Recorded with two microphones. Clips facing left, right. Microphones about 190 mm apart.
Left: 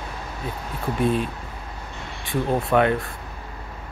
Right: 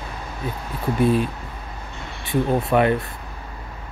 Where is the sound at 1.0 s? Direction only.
5° right (ahead or behind).